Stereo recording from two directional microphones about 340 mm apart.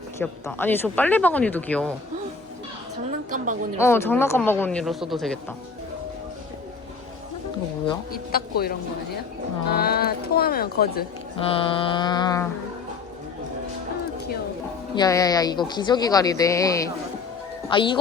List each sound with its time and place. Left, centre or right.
0.2 s speech: centre
3.2 s a woman's voice: right
3.8 s speech: centre
8.3 s speech: left
11.4 s speech: centre
14.9 s speech: centre